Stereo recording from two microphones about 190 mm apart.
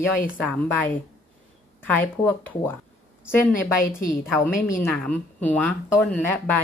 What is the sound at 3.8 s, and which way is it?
Speech, 45° left (ahead or behind).